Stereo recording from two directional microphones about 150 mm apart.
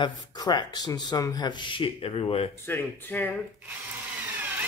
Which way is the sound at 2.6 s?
15° left (ahead or behind).